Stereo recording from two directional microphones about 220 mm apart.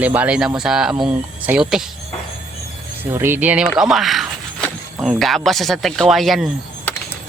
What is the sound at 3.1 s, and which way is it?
Speech, 10° right (ahead or behind).